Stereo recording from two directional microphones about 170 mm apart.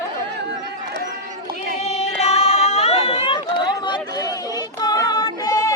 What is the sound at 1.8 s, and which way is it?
Chatter, 40° left (ahead or behind).